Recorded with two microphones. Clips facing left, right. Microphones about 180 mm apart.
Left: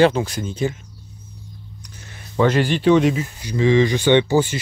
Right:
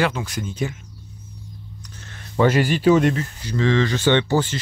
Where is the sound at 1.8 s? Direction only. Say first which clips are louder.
Even; 10° left (ahead or behind).